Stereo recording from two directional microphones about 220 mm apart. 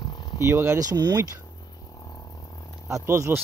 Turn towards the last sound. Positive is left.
turn(degrees=-10)  # may be behind; listen again after turning